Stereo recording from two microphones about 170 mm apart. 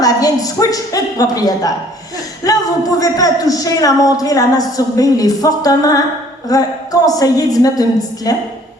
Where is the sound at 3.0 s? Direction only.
20° left (ahead or behind).